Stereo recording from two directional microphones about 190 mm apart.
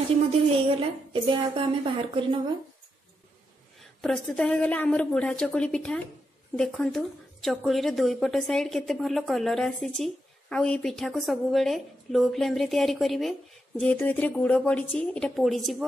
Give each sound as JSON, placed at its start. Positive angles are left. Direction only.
{"t": 0.7, "sound": "speech", "side_deg": -30}
{"t": 3.8, "sound": "a woman's voice", "side_deg": 5}